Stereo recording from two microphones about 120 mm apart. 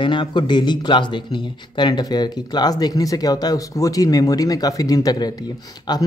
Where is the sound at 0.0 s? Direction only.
45° left (ahead or behind).